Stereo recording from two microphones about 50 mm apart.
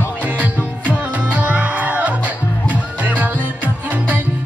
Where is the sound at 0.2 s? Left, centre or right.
Right.